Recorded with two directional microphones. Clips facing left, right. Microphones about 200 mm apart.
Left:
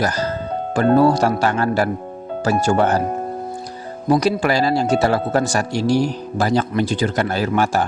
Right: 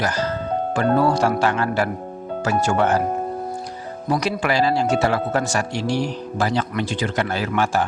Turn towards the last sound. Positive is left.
turn(degrees=40)  # may be behind; listen again after turning